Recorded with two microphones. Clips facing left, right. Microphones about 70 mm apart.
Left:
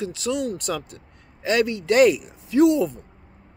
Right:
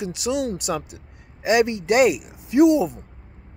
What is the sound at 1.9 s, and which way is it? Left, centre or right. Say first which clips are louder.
Speech: left 3 dB; centre.